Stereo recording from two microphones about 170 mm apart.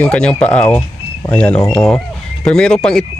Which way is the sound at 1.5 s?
20° left (ahead or behind).